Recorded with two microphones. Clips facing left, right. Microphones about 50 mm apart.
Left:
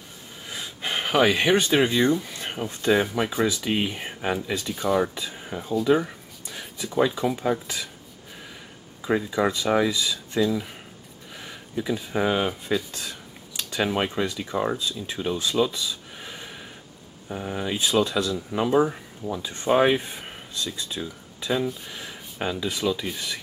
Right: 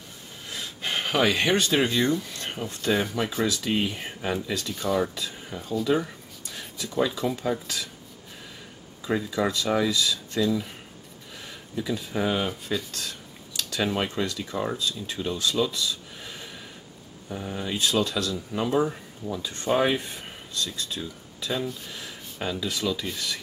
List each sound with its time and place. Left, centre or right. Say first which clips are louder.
0.5 s speech: left 1 dB; centre
9.0 s speech: left 3 dB; centre